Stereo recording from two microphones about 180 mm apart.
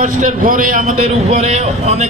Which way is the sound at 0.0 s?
45° right (ahead or behind).